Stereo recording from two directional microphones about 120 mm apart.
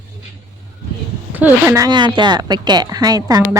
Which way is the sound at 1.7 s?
30° right (ahead or behind).